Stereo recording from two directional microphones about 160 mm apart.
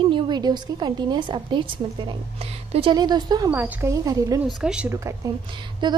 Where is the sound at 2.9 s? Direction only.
25° right (ahead or behind).